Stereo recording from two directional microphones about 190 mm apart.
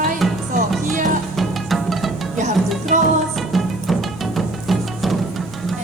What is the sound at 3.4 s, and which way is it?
Music, centre (ahead or behind).